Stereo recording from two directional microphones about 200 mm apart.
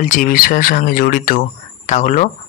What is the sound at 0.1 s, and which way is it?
Speech, 45° left (ahead or behind).